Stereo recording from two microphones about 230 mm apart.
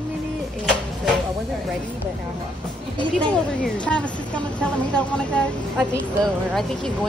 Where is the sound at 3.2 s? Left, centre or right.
Centre.